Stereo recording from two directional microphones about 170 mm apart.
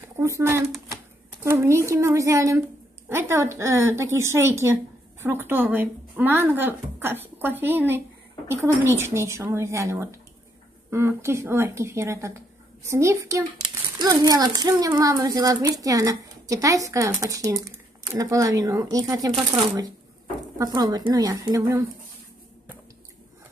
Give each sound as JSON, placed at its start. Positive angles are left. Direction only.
{"t": 0.0, "sound": "speech", "side_deg": -15}